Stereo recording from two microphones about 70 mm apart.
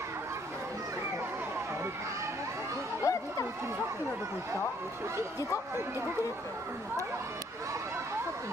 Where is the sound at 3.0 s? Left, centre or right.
Left.